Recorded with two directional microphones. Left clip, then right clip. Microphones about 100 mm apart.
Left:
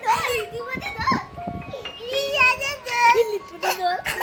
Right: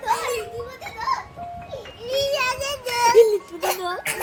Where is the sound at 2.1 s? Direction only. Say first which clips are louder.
Left 3 dB; 20° right (ahead or behind).